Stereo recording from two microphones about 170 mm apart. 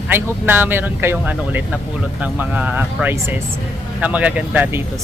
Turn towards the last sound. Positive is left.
turn(degrees=-10)  # may be behind; listen again after turning